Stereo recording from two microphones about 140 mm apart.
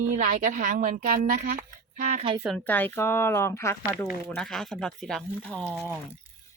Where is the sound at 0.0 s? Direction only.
80° right.